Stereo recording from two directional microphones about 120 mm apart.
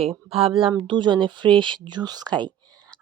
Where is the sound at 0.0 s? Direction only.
55° right (ahead or behind).